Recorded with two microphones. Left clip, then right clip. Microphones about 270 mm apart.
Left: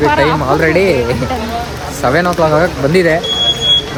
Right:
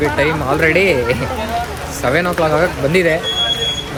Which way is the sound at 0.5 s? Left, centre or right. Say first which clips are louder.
Even; centre.